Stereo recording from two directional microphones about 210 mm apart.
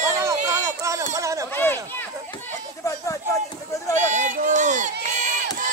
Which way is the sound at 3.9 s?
35° right (ahead or behind).